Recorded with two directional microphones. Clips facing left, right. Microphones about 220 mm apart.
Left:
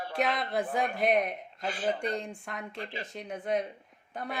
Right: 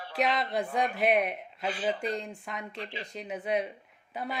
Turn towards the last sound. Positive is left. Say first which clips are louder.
# right 1 dB
turn(degrees=0)  # may be behind; listen again after turning